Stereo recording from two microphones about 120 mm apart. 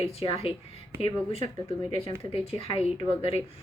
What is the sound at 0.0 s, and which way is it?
A woman's voice, 55° left (ahead or behind).